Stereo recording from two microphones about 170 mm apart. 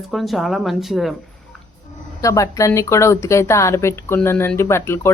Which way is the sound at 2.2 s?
20° left (ahead or behind).